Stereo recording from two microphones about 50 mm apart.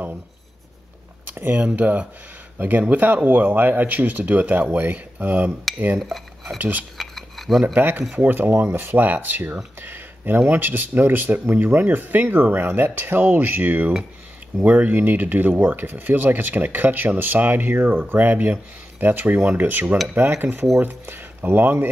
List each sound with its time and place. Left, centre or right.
1.3 s speech: right
5.9 s cutlery: centre
6.6 s speech: right
7.0 s a sound: centre
7.6 s speech: right
8.9 s speech: right
20.2 s speech: right